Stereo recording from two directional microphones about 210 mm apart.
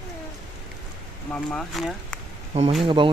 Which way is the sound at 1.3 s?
5° left (ahead or behind).